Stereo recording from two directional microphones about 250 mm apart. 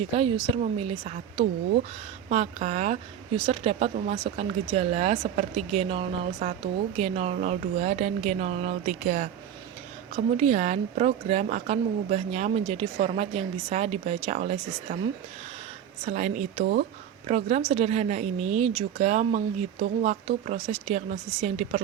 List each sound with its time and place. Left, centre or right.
0.5 s a woman's voice: right
16.0 s a woman's voice: right